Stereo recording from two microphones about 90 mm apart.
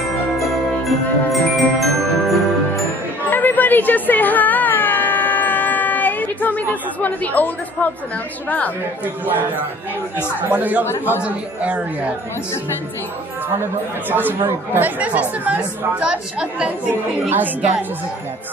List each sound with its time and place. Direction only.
0.4 s jingle bell: centre (ahead or behind)
3.3 s music: 20° left (ahead or behind)
6.7 s speech: 20° left (ahead or behind)
10.5 s a woman's voice: 15° right (ahead or behind)
13.6 s a woman's voice: 20° right (ahead or behind)